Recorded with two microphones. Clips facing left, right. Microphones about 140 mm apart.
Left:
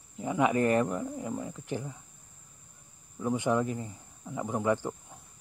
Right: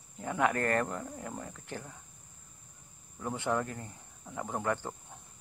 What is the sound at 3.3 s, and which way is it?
Speech, 15° left (ahead or behind).